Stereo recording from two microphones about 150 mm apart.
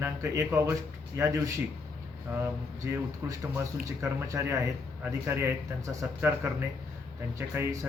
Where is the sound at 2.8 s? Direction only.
20° right (ahead or behind).